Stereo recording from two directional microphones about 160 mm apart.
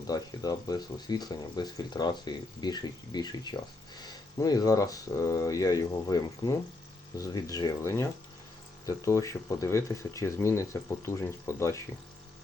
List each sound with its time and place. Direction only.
0.1 s speech: 25° left (ahead or behind)